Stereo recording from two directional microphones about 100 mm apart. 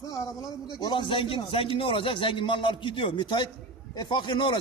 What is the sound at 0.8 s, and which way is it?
A man's voice, 50° left (ahead or behind).